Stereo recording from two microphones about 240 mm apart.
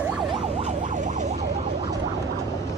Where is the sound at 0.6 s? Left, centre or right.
Right.